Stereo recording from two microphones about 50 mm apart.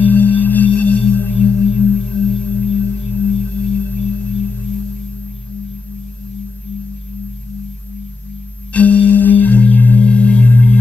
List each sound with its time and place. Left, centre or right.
0.0 s singing bowl: left
3.3 s singing bowl: left
8.7 s music: left